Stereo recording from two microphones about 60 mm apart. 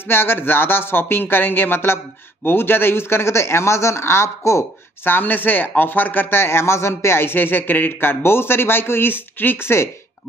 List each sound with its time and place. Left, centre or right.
0.1 s speech: left
5.0 s speech: left